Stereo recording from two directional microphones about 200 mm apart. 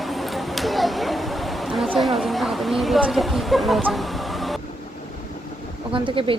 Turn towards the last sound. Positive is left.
turn(degrees=-25)  # may be behind; listen again after turning